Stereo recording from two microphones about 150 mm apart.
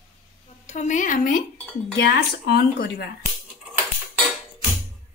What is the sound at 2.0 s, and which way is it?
Speech, 90° left.